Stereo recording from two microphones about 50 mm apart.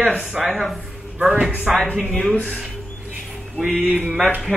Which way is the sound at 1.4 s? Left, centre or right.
Right.